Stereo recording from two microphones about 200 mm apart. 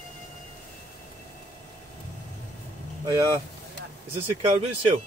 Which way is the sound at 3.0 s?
20° right (ahead or behind).